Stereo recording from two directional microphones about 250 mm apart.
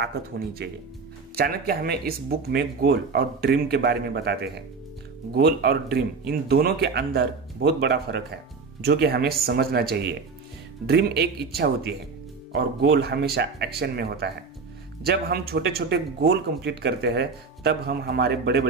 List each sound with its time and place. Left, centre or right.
0.0 s speech: right